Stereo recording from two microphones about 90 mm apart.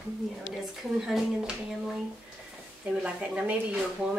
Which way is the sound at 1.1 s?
5° right (ahead or behind).